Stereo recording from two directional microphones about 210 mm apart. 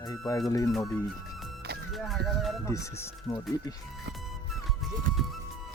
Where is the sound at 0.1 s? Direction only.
15° left (ahead or behind).